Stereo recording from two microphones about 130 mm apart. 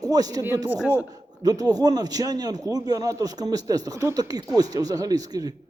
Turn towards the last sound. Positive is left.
turn(degrees=-30)  # may be behind; listen again after turning